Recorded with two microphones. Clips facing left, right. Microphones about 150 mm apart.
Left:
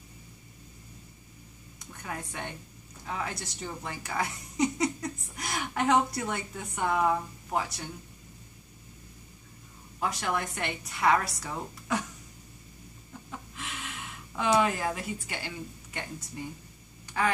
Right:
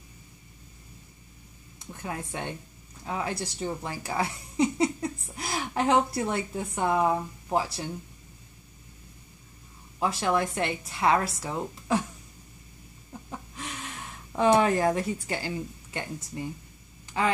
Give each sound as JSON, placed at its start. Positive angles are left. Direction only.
{"t": 1.9, "sound": "a woman's voice", "side_deg": -25}
{"t": 9.9, "sound": "a woman's voice", "side_deg": -25}
{"t": 13.6, "sound": "gasp", "side_deg": -35}
{"t": 14.6, "sound": "a woman's voice", "side_deg": -35}